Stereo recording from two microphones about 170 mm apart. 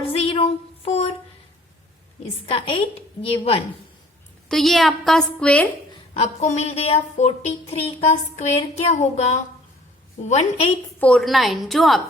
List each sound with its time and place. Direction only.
0.0 s a sound: 35° left (ahead or behind)
2.5 s speech: 30° left (ahead or behind)
4.4 s a woman's voice: centre (ahead or behind)
6.1 s speech: 45° left (ahead or behind)
11.0 s a woman's voice: 5° left (ahead or behind)